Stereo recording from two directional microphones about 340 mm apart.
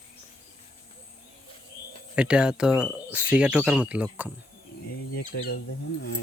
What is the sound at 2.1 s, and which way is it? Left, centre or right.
Speech, centre.